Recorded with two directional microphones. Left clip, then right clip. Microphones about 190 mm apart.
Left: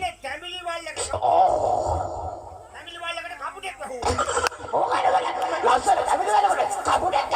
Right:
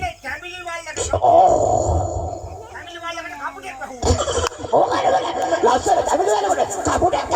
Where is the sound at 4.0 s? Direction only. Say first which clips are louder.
Right 3 dB; 30° right (ahead or behind).